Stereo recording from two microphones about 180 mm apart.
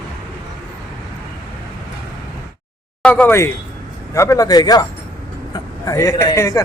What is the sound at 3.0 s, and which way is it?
A man's voice, 10° left (ahead or behind).